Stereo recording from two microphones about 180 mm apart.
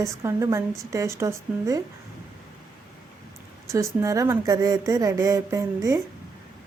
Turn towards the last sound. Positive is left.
turn(degrees=-15)  # may be behind; listen again after turning